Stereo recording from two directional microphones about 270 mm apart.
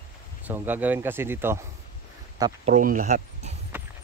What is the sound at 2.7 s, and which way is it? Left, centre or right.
Speech, right.